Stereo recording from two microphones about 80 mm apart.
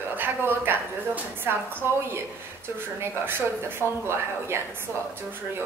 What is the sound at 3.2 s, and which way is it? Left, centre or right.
A woman's voice, right.